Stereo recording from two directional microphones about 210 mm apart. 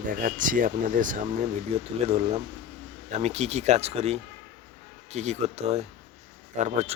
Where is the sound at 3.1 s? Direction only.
30° right (ahead or behind).